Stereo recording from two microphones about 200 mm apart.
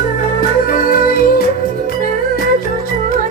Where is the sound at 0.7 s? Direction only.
45° left (ahead or behind).